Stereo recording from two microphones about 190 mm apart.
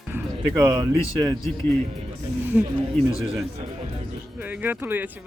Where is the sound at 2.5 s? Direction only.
10° right (ahead or behind).